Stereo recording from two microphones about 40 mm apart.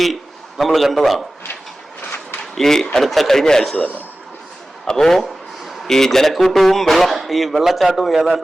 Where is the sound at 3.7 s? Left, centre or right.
Left.